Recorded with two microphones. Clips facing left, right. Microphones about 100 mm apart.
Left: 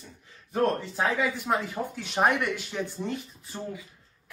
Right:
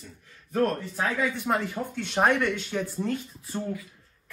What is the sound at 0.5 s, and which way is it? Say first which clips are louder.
Speech: even; 15° left (ahead or behind).